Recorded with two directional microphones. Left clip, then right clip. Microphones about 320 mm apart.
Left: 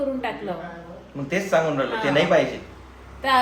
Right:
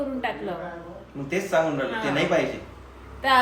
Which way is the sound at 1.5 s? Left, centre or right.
Left.